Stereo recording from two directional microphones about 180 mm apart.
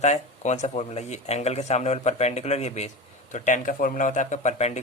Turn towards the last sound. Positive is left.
turn(degrees=40)  # may be behind; listen again after turning